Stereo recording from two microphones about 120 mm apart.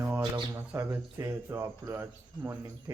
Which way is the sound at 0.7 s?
20° right (ahead or behind).